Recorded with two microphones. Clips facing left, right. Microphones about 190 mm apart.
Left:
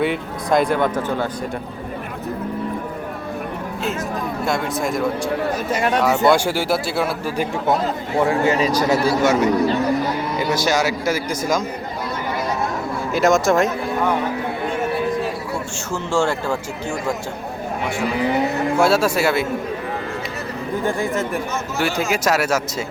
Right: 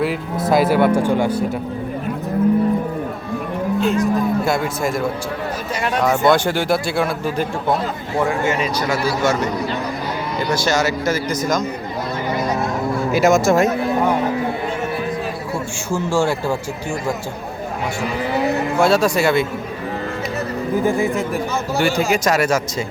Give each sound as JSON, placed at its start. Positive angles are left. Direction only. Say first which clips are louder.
{"t": 0.0, "sound": "speech", "louder": "right 1 dB", "side_deg": 0}
{"t": 3.8, "sound": "speech", "louder": "right 8 dB", "side_deg": 0}
{"t": 8.3, "sound": "a man's voice", "louder": "left 2 dB", "side_deg": 35}
{"t": 9.2, "sound": "speech", "louder": "left 1 dB", "side_deg": 5}
{"t": 11.0, "sound": "speech", "louder": "right 2 dB", "side_deg": 10}
{"t": 13.1, "sound": "speech", "louder": "right 1 dB", "side_deg": 0}
{"t": 15.9, "sound": "speech", "louder": "right 2 dB", "side_deg": -10}
{"t": 18.8, "sound": "speech", "louder": "right 1 dB", "side_deg": 5}
{"t": 20.8, "sound": "speech", "louder": "right 1 dB", "side_deg": 0}